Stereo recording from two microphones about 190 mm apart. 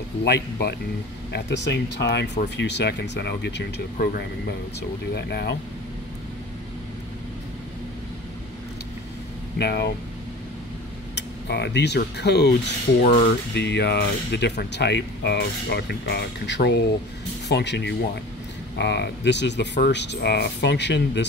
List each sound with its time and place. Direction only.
0.2 s speech: 60° left (ahead or behind)
9.6 s speech: 60° left (ahead or behind)
11.1 s speech: 65° left (ahead or behind)
13.0 s speech: 45° left (ahead or behind)
13.6 s speech: 65° left (ahead or behind)